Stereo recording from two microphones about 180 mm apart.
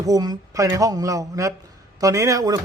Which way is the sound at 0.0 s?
20° right (ahead or behind).